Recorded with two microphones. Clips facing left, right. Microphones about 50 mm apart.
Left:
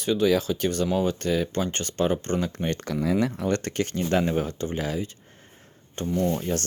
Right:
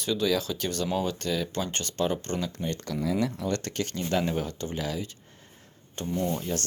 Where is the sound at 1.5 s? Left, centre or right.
Centre.